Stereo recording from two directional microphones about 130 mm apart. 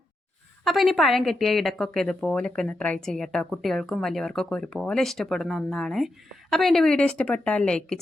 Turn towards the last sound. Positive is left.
turn(degrees=5)  # may be behind; listen again after turning